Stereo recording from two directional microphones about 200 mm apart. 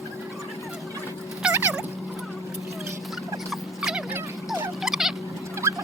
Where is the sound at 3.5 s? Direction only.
Centre (ahead or behind).